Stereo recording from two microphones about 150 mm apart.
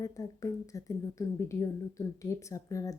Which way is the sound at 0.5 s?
20° left (ahead or behind).